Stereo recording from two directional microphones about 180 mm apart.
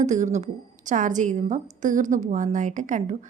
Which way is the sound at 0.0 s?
40° right (ahead or behind).